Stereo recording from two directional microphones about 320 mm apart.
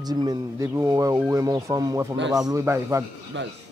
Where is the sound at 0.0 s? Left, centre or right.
Centre.